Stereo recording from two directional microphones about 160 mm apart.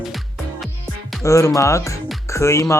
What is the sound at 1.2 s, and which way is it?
Speech, 20° left (ahead or behind).